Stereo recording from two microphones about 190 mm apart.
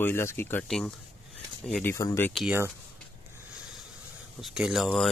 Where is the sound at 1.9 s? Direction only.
15° left (ahead or behind).